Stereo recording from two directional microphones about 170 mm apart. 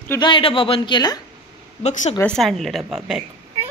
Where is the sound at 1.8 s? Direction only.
40° left (ahead or behind).